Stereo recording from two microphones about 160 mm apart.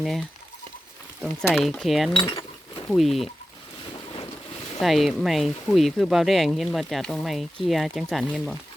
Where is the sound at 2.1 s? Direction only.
30° left (ahead or behind).